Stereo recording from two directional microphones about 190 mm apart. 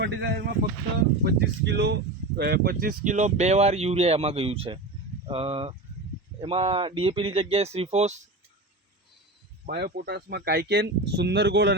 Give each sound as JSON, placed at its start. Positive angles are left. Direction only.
{"t": 0.0, "sound": "speech", "side_deg": -60}
{"t": 9.6, "sound": "speech", "side_deg": -60}